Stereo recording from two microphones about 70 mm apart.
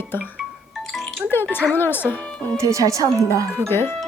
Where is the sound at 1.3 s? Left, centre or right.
Left.